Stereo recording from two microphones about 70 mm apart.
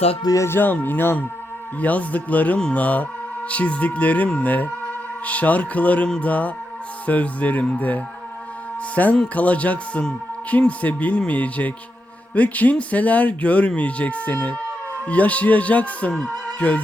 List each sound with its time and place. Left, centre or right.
0.3 s speech: left; by 16.8 s centre